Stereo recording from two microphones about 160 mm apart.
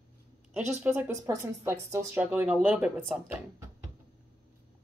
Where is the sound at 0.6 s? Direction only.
45° right (ahead or behind).